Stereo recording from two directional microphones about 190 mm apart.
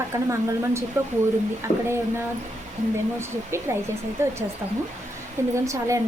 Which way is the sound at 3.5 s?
15° right (ahead or behind).